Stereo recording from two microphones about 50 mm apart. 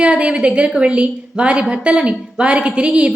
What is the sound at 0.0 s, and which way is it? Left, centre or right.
Speech, right.